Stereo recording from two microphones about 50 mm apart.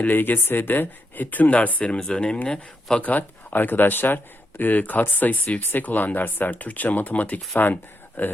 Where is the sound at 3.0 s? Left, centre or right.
Left.